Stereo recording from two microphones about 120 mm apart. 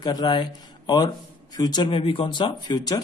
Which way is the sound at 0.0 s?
35° left (ahead or behind).